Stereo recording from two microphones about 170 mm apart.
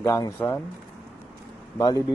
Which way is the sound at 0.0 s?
20° left (ahead or behind).